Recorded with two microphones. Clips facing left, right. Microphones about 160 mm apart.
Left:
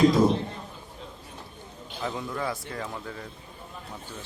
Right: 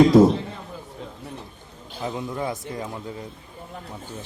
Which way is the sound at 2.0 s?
20° right (ahead or behind).